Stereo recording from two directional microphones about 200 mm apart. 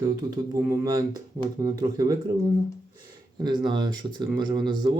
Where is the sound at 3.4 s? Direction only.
20° right (ahead or behind).